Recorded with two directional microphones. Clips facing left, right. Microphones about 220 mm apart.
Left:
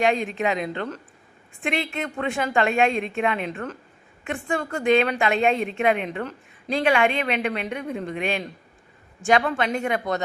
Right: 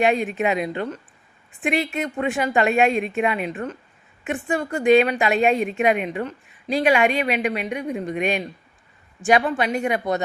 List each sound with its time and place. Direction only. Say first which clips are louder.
0.0 s a woman's voice: right 2 dB; 15° right (ahead or behind)
2.9 s a woman's voice: right 2 dB; 5° right (ahead or behind)